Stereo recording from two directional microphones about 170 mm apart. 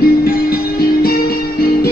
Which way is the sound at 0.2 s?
65° left (ahead or behind).